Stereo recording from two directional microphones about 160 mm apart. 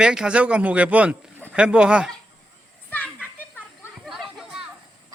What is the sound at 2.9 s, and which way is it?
Children playing, 10° left (ahead or behind).